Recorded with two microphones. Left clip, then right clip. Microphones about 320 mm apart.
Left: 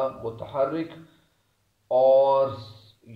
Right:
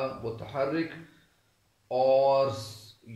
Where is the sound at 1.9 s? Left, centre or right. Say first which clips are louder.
Left 5 dB; left.